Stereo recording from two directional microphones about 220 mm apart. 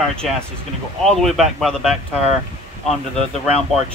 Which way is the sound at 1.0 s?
Centre (ahead or behind).